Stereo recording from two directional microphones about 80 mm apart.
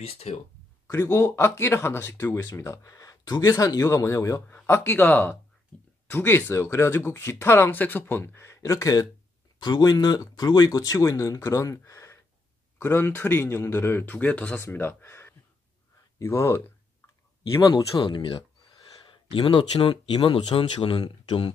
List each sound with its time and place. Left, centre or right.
0.8 s speech: left
5.7 s a sound: centre
6.0 s speech: left
9.6 s speech: left
12.7 s speech: left
14.6 s speech: left
17.4 s speech: left